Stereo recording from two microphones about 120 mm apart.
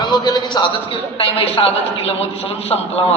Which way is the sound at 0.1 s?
40° left (ahead or behind).